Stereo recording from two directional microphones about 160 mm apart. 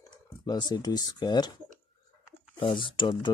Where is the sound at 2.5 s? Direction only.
30° left (ahead or behind).